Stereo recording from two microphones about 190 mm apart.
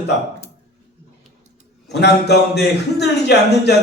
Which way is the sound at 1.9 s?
60° left (ahead or behind).